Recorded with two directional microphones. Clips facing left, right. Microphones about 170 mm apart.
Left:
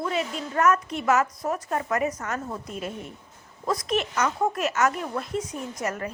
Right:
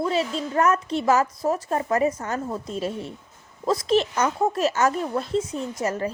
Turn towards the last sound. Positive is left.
turn(degrees=-30)  # may be behind; listen again after turning